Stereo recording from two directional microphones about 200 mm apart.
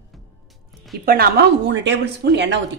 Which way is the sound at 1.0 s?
50° right (ahead or behind).